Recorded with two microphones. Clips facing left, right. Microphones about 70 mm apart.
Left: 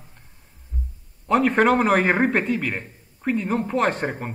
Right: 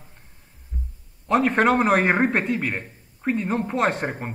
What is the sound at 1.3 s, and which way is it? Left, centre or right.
A man's voice, centre.